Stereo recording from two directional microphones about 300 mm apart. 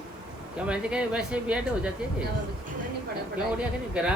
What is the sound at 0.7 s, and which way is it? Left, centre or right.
A man's voice, centre.